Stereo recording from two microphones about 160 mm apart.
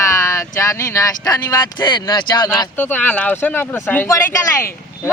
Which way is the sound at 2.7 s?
10° left (ahead or behind).